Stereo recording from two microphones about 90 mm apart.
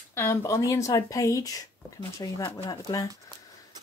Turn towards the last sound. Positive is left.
turn(degrees=50)  # may be behind; listen again after turning